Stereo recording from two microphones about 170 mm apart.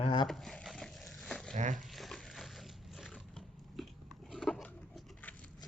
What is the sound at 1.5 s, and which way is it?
Speech, 45° right (ahead or behind).